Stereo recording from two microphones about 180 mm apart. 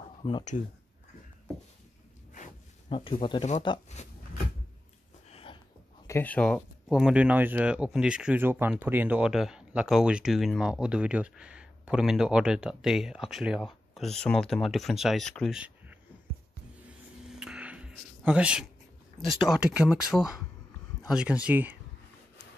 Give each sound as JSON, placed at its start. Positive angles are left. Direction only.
{"t": 0.2, "sound": "speech", "side_deg": 25}
{"t": 2.9, "sound": "speech", "side_deg": 30}
{"t": 3.9, "sound": "a sound", "side_deg": 40}
{"t": 6.0, "sound": "speech", "side_deg": 10}
{"t": 17.3, "sound": "a sound", "side_deg": -5}
{"t": 19.1, "sound": "speech", "side_deg": 0}